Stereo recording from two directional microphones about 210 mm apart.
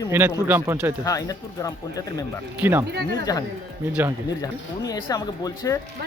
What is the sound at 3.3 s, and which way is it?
Speech, 15° left (ahead or behind).